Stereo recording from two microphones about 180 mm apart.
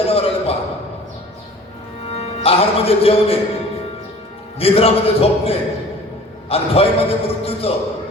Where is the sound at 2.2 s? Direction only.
35° left (ahead or behind).